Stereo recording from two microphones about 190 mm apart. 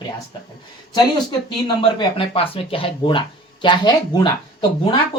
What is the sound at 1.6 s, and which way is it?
Speech, 25° left (ahead or behind).